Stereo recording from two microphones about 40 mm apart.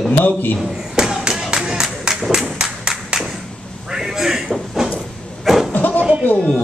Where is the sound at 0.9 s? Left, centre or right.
Centre.